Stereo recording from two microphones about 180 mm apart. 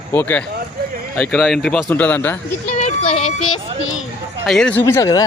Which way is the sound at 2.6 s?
40° left (ahead or behind).